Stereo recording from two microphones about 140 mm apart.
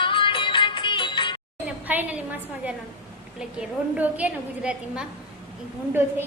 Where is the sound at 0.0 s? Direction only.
40° left (ahead or behind).